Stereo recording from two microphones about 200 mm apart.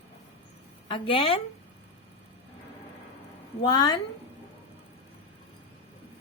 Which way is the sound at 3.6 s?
20° left (ahead or behind).